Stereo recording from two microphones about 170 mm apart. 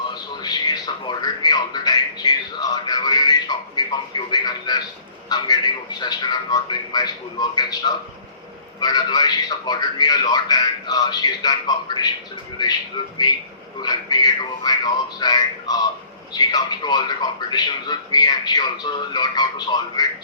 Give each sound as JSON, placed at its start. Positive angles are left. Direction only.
{"t": 0.1, "sound": "a man's voice", "side_deg": 25}
{"t": 13.2, "sound": "a man's voice", "side_deg": 25}